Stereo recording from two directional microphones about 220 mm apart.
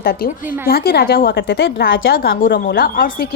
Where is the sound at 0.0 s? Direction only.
45° left (ahead or behind).